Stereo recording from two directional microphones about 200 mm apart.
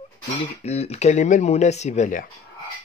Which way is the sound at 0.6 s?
30° left (ahead or behind).